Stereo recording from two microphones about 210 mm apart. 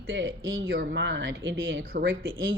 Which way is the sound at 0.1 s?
65° right (ahead or behind).